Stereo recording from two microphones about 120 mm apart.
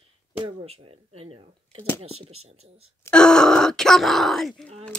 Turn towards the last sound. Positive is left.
turn(degrees=5)  # may be behind; listen again after turning